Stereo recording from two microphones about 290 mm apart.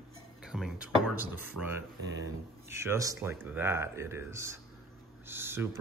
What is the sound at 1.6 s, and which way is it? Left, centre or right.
Speech, right.